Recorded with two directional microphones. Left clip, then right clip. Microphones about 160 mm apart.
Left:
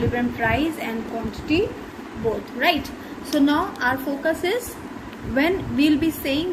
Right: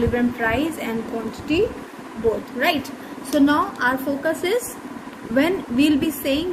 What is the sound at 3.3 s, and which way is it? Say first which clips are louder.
A woman's voice: right 2 dB; 65° right (ahead or behind).